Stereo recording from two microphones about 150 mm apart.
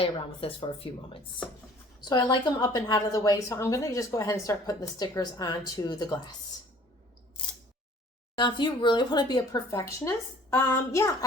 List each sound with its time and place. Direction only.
0.0 s a woman's voice: 35° left (ahead or behind)
8.4 s a woman's voice: 30° left (ahead or behind)